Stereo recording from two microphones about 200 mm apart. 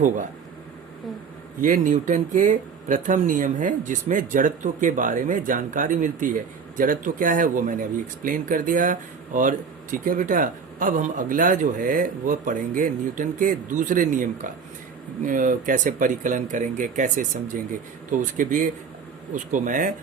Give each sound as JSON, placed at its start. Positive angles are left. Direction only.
{"t": 1.6, "sound": "speech", "side_deg": -40}